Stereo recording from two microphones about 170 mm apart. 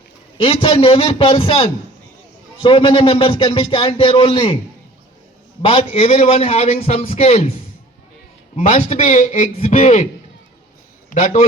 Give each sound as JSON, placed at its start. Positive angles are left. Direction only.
{"t": 0.3, "sound": "a man's voice", "side_deg": 30}
{"t": 5.6, "sound": "a man's voice", "side_deg": 35}
{"t": 8.5, "sound": "a man's voice", "side_deg": 40}
{"t": 11.1, "sound": "a man's voice", "side_deg": 40}